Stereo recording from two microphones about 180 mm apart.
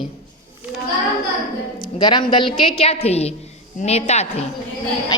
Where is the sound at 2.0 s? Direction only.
25° left (ahead or behind).